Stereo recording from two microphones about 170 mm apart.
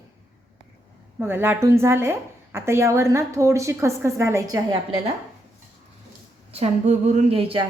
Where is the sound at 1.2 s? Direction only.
15° right (ahead or behind).